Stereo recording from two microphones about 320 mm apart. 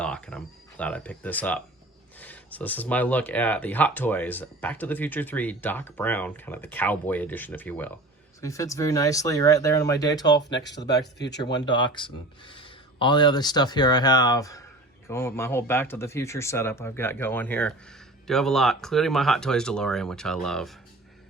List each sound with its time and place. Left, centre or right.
0.0 s speech: centre
10.7 s speech: left
11.5 s speech: centre